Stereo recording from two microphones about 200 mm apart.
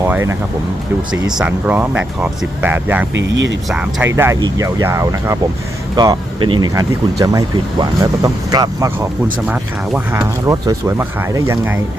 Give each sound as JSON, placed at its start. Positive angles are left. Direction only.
{"t": 0.0, "sound": "speech", "side_deg": -15}
{"t": 3.2, "sound": "speech", "side_deg": -65}
{"t": 3.7, "sound": "speech", "side_deg": -5}
{"t": 9.5, "sound": "speech", "side_deg": -10}